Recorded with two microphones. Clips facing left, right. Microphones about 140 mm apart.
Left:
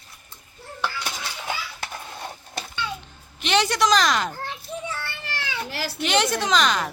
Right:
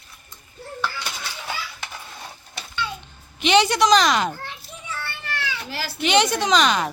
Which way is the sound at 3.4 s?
Centre (ahead or behind).